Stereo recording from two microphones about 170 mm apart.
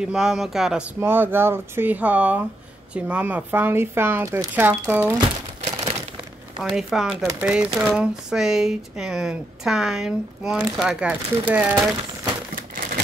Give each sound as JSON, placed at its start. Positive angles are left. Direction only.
{"t": 0.0, "sound": "speech", "side_deg": -5}
{"t": 5.6, "sound": "crumpling", "side_deg": -40}
{"t": 6.6, "sound": "speech", "side_deg": 0}